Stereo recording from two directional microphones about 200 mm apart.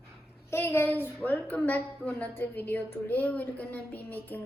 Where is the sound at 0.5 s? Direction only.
10° left (ahead or behind).